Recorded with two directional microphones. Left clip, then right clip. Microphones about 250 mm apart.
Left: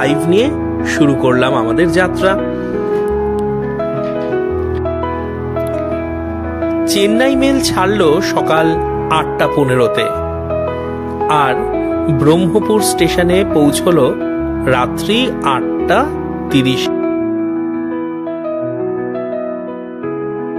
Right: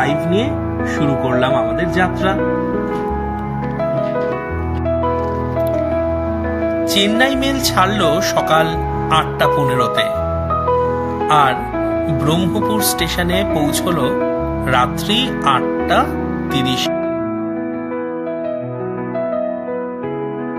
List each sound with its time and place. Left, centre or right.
0.0 s speech: left
7.2 s speech: left
11.2 s music: left
12.2 s speech: left